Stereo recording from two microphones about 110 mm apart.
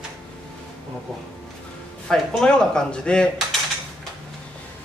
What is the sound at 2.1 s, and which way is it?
Speech, 5° left (ahead or behind).